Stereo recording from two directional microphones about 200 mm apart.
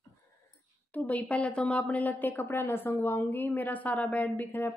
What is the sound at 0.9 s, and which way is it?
A woman's voice, 10° left (ahead or behind).